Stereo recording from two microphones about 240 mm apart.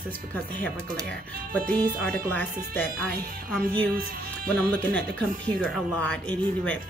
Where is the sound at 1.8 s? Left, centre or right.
Right.